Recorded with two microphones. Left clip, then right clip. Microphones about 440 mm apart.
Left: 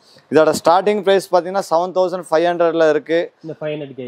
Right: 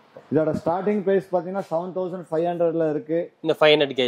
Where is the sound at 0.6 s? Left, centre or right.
Centre.